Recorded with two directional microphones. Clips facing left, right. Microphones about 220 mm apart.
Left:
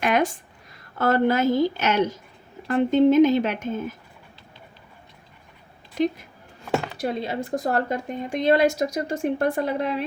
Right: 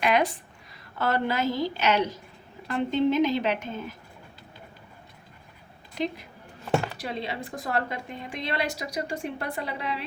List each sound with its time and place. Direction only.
0.0 s a woman's voice: 45° left (ahead or behind)
5.9 s a woman's voice: 50° left (ahead or behind)